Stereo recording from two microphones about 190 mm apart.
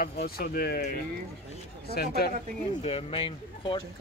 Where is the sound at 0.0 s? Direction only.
55° left (ahead or behind).